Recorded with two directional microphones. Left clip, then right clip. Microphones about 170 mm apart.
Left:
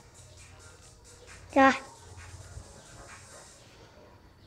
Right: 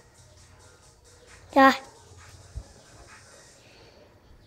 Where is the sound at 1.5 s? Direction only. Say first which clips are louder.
Right 4 dB; 10° right (ahead or behind).